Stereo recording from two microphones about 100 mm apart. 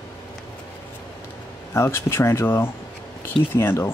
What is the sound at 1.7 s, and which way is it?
Speech, 25° left (ahead or behind).